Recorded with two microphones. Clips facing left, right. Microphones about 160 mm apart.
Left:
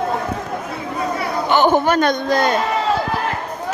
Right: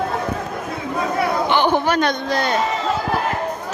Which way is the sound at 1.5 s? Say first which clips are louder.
Left 6 dB; 45° left (ahead or behind).